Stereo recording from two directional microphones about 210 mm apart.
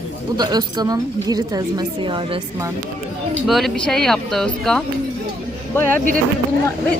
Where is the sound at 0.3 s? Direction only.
20° right (ahead or behind).